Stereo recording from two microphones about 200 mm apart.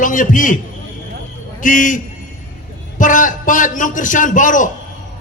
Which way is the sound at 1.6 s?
40° left (ahead or behind).